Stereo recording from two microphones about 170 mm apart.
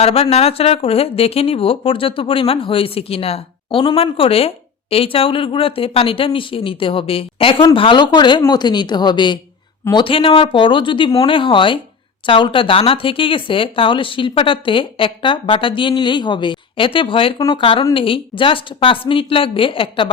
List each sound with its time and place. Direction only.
0.0 s speech: 35° left (ahead or behind)